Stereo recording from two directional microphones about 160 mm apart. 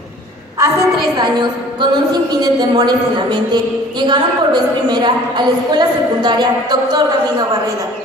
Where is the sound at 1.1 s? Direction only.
25° right (ahead or behind).